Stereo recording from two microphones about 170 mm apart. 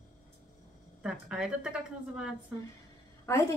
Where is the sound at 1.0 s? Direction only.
5° right (ahead or behind).